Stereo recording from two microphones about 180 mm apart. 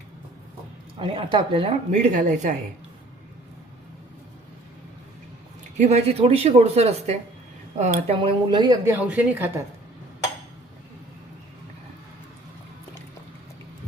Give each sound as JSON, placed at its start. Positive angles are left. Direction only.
{"t": 0.9, "sound": "speech", "side_deg": -30}
{"t": 5.7, "sound": "speech", "side_deg": -40}
{"t": 8.2, "sound": "a woman's voice", "side_deg": -25}